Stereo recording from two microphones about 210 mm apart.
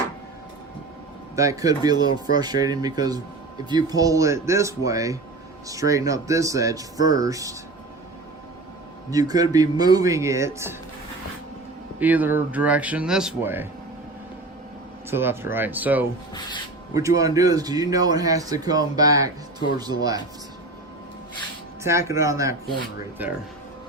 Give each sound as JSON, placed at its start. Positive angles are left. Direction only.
{"t": 1.4, "sound": "speech", "side_deg": -15}
{"t": 9.0, "sound": "speech", "side_deg": -15}
{"t": 11.9, "sound": "speech", "side_deg": -10}
{"t": 15.1, "sound": "speech", "side_deg": -10}
{"t": 21.8, "sound": "speech", "side_deg": -15}